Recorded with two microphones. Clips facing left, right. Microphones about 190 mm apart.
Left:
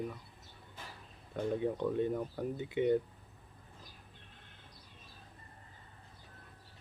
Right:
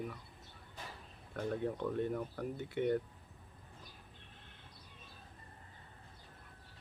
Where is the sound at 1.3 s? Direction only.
15° left (ahead or behind).